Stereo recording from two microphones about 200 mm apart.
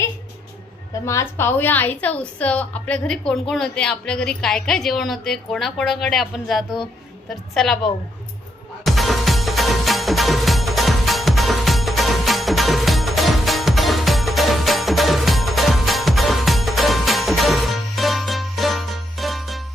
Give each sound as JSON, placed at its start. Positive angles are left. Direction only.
{"t": 1.0, "sound": "a woman's voice", "side_deg": 15}
{"t": 8.8, "sound": "music", "side_deg": 0}